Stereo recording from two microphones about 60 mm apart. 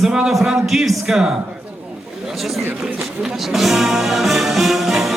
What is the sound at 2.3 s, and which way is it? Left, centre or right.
Speech, centre.